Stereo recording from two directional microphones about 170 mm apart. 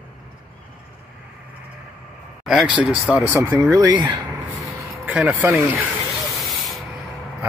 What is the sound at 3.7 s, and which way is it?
Speech, 25° right (ahead or behind).